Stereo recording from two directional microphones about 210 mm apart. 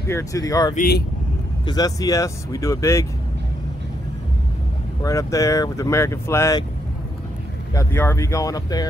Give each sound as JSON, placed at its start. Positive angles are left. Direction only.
{"t": 0.1, "sound": "speech", "side_deg": 15}
{"t": 0.7, "sound": "speech", "side_deg": 45}
{"t": 1.7, "sound": "speech", "side_deg": 15}
{"t": 5.0, "sound": "speech", "side_deg": 15}
{"t": 7.7, "sound": "speech", "side_deg": 10}